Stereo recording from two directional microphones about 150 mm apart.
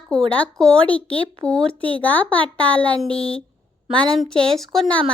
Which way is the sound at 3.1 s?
40° left (ahead or behind).